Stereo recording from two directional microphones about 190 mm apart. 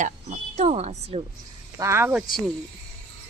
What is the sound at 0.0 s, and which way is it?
Speech, 40° right (ahead or behind).